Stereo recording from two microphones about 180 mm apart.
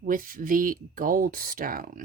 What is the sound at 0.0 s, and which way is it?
Speech, 50° right (ahead or behind).